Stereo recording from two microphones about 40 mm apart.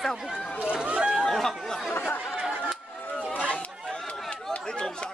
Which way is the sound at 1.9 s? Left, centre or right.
Left.